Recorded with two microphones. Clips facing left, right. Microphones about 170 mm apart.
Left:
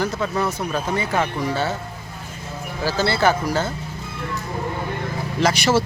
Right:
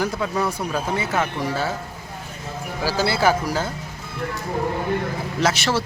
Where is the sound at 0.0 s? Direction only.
10° right (ahead or behind).